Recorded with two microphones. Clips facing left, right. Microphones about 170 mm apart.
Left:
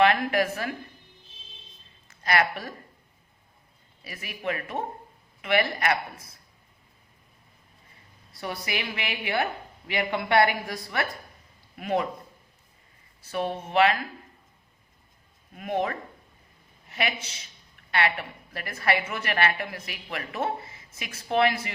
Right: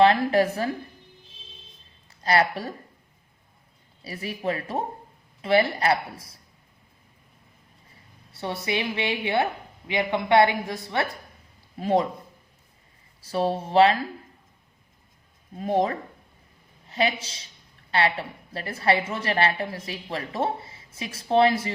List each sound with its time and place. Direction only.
0.0 s speech: 30° right (ahead or behind)
2.0 s a woman's voice: 30° right (ahead or behind)
4.0 s speech: 30° right (ahead or behind)
8.3 s a woman's voice: 25° right (ahead or behind)
13.2 s speech: 30° right (ahead or behind)
15.5 s a woman's voice: 30° right (ahead or behind)